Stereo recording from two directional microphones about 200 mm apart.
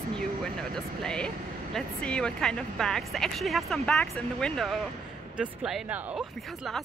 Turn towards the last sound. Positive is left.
turn(degrees=0)  # may be behind; listen again after turning